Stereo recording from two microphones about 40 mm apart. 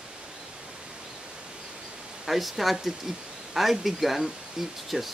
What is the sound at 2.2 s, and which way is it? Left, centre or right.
Speech, centre.